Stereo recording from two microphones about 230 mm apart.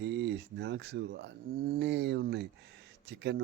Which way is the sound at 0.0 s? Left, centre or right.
Right.